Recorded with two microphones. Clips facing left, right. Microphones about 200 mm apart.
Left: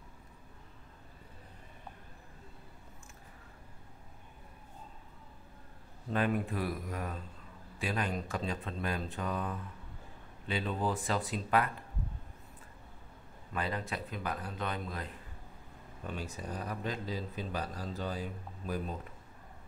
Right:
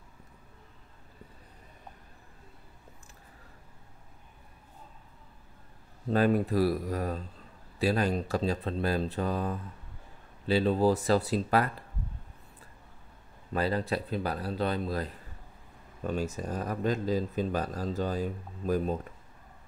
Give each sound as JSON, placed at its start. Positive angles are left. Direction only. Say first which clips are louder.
{"t": 6.0, "sound": "speech", "louder": "right 7 dB", "side_deg": -40}
{"t": 13.5, "sound": "speech", "louder": "right 8 dB", "side_deg": -35}